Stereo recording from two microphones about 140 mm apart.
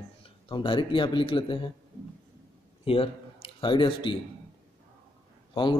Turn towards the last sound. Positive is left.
turn(degrees=35)  # may be behind; listen again after turning